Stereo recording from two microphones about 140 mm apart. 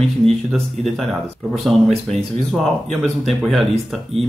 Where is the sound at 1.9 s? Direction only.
50° right (ahead or behind).